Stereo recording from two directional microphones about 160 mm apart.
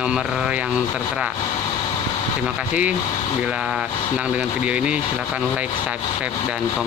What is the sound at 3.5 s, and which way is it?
Speech, 5° right (ahead or behind).